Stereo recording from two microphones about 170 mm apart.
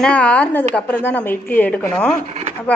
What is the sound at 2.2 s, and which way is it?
Speech, 40° right (ahead or behind).